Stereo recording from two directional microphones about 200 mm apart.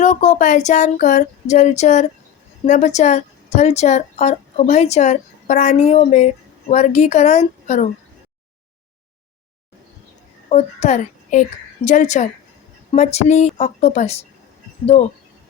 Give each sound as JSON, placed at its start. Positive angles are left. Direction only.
{"t": 0.0, "sound": "a woman's voice", "side_deg": 35}
{"t": 10.5, "sound": "a woman's voice", "side_deg": 35}